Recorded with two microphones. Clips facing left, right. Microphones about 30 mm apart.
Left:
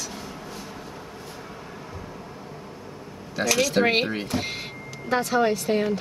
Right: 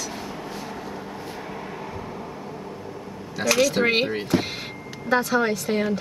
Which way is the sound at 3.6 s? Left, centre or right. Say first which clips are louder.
Right 1 dB; centre.